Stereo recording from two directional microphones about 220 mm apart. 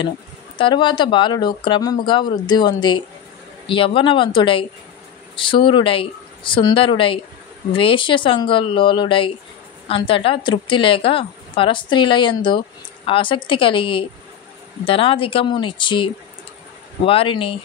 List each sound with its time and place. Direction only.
0.6 s a woman's voice: 20° left (ahead or behind)